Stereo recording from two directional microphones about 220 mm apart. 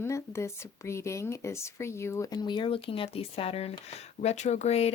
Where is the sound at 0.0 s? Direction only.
10° left (ahead or behind).